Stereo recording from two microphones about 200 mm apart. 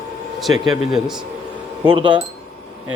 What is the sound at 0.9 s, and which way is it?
Speech, centre (ahead or behind).